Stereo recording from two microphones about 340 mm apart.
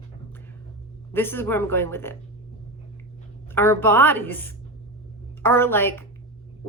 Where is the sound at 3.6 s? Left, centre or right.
Centre.